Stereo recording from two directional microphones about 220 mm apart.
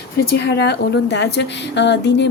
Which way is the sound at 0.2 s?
50° left (ahead or behind).